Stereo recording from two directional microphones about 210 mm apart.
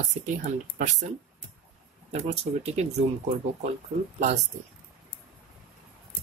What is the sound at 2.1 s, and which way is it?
Speech, 30° right (ahead or behind).